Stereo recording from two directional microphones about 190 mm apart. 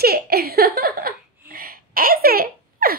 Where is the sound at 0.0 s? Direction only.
55° right (ahead or behind).